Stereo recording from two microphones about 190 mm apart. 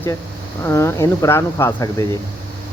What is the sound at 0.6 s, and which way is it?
Speech, 15° left (ahead or behind).